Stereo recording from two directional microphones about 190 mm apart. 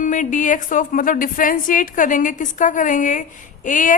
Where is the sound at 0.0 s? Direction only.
40° left (ahead or behind).